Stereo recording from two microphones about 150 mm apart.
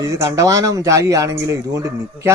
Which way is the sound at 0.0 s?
20° right (ahead or behind).